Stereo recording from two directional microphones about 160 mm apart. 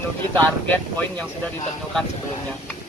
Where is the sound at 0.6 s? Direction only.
10° left (ahead or behind).